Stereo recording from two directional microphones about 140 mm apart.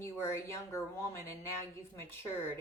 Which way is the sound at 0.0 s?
20° left (ahead or behind).